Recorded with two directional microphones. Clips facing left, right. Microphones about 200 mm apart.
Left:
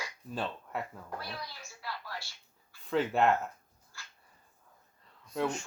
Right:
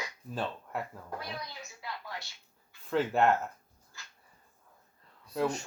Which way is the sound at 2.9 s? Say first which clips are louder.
Right 1 dB; centre (ahead or behind).